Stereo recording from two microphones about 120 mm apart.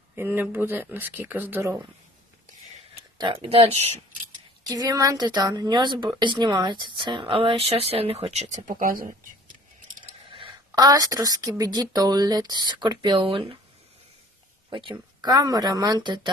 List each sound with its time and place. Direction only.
0.2 s speech: 20° right (ahead or behind)
3.2 s speech: 45° right (ahead or behind)
4.7 s speech: 30° right (ahead or behind); by 8.7 s 80° right
10.0 s a sound: 45° right (ahead or behind)
10.8 s speech: 35° right (ahead or behind); by 13.6 s 50° right (ahead or behind)
14.7 s speech: 45° right (ahead or behind)